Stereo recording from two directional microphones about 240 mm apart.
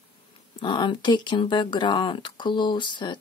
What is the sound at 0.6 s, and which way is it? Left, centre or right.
Speech, centre.